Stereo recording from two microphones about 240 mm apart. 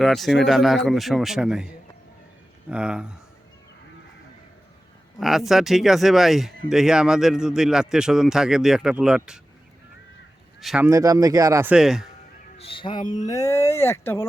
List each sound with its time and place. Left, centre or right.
0.0 s a man's voice: centre
5.2 s a man's voice: centre
10.6 s speech: centre
10.8 s speech: centre
12.5 s speech: left